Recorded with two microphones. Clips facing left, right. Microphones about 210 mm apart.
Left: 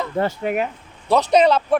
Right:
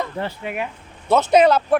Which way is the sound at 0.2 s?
45° left (ahead or behind).